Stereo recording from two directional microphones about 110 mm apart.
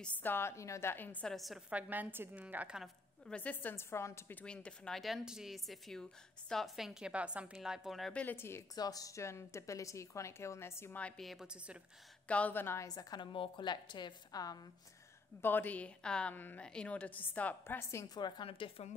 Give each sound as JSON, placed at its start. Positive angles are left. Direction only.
{"t": 0.0, "sound": "a woman's voice", "side_deg": 15}
{"t": 1.3, "sound": "a woman's voice", "side_deg": 0}
{"t": 1.7, "sound": "a woman's voice", "side_deg": -15}
{"t": 3.3, "sound": "a woman's voice", "side_deg": 10}
{"t": 8.1, "sound": "a woman's voice", "side_deg": 15}
{"t": 8.7, "sound": "a woman's voice", "side_deg": 35}
{"t": 11.0, "sound": "a woman's voice", "side_deg": 10}
{"t": 11.2, "sound": "a woman's voice", "side_deg": -5}
{"t": 12.3, "sound": "a woman's voice", "side_deg": 15}
{"t": 12.8, "sound": "a woman's voice", "side_deg": 35}
{"t": 15.4, "sound": "a woman's voice", "side_deg": 15}
{"t": 18.0, "sound": "speech", "side_deg": 40}